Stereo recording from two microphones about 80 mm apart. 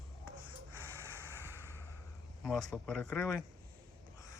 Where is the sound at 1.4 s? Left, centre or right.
Right.